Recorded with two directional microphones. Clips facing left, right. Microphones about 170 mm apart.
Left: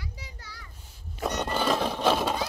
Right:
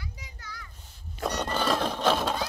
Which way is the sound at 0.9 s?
5° left (ahead or behind).